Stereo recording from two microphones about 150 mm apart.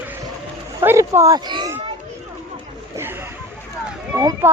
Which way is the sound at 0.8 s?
15° right (ahead or behind).